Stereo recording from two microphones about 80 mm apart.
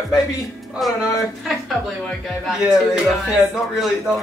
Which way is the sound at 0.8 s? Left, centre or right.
Centre.